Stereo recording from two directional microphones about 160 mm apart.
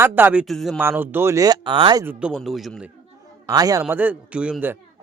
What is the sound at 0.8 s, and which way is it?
Speech, 15° right (ahead or behind).